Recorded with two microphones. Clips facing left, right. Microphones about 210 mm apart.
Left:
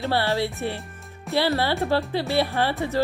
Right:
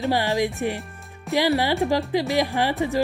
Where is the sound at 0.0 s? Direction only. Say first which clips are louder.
Right 2 dB; 15° right (ahead or behind).